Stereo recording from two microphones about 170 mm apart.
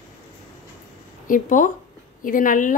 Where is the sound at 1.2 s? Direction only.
50° left (ahead or behind).